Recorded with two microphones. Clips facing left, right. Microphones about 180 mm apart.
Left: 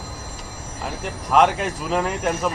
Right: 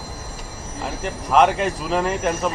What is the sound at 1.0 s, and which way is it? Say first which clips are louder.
Speech: right 1 dB; centre (ahead or behind).